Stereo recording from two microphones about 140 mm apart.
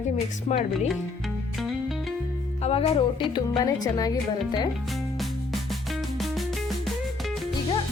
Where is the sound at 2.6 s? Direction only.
45° left (ahead or behind).